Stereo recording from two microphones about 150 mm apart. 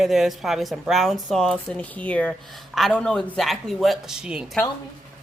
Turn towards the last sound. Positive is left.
turn(degrees=-5)  # may be behind; listen again after turning